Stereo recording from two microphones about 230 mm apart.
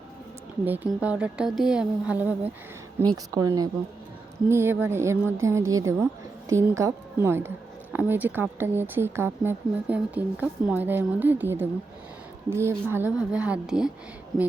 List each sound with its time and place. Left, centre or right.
0.6 s speech: centre